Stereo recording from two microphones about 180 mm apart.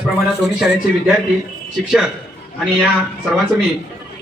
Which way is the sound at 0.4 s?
5° right (ahead or behind).